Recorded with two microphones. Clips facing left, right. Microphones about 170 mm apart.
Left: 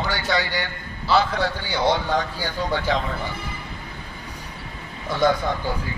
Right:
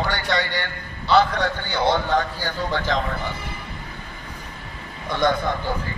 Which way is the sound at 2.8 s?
50° right (ahead or behind).